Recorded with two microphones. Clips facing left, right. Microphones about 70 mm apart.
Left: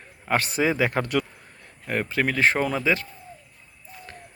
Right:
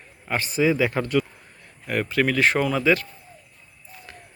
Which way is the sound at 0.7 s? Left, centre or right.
Left.